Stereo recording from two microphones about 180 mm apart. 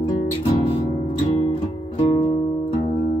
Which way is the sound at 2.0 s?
25° left (ahead or behind).